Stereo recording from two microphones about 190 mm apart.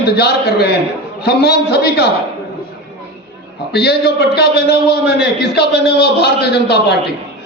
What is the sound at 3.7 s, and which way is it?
A man's voice, 60° left (ahead or behind).